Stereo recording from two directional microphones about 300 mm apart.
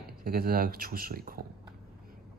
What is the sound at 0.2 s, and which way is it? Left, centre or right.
Speech, right.